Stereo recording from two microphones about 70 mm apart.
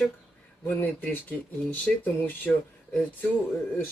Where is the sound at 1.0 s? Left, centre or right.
Left.